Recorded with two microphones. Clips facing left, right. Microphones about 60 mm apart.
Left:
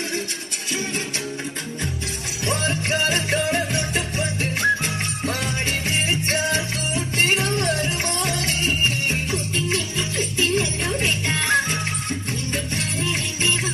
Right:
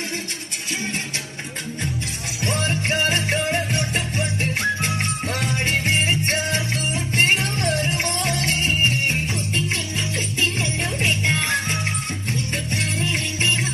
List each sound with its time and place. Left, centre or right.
2.4 s music: right
10.3 s music: right